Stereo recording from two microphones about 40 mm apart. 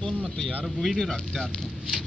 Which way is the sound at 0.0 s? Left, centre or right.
Centre.